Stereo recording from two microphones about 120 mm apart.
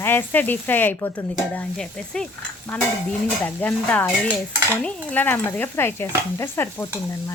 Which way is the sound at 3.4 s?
15° left (ahead or behind).